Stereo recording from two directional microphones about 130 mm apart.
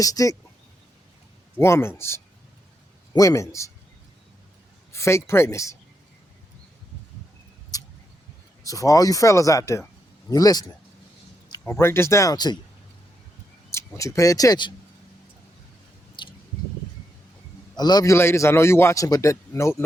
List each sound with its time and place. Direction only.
0.0 s a man's voice: 25° left (ahead or behind)
1.5 s a man's voice: 20° left (ahead or behind)
4.9 s a man's voice: 20° left (ahead or behind)
7.7 s vehicle: 30° left (ahead or behind)
8.6 s a man's voice: 25° left (ahead or behind)
11.6 s a man's voice: 20° left (ahead or behind)
13.7 s speech: 20° left (ahead or behind)
16.2 s a sound: 40° left (ahead or behind)
17.7 s a man's voice: 30° left (ahead or behind)